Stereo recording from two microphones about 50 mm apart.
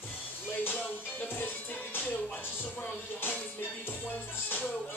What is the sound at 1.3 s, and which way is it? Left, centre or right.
Music, left.